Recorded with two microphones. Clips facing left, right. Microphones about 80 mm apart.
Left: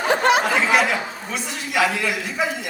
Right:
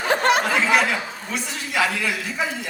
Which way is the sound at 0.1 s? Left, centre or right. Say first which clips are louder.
Left 1 dB; right.